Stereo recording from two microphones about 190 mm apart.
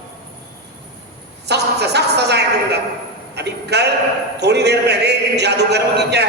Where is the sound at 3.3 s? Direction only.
60° right (ahead or behind).